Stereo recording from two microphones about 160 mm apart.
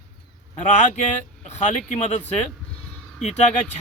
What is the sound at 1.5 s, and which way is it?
Speech, 45° left (ahead or behind).